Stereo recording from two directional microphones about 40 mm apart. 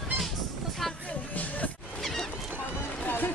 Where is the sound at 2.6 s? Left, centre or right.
Left.